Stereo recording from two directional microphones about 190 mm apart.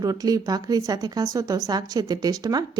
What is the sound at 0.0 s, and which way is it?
A woman's voice, 20° right (ahead or behind).